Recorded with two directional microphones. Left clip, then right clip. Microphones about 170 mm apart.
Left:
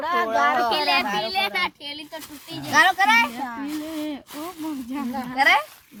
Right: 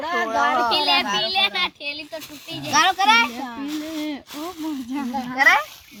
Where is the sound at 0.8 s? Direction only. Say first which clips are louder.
Right 2 dB; 30° right (ahead or behind).